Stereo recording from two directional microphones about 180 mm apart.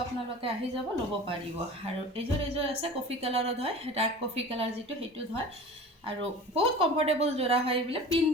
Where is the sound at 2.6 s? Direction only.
35° right (ahead or behind).